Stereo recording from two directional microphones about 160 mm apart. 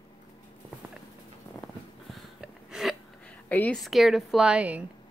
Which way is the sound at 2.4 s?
Centre (ahead or behind).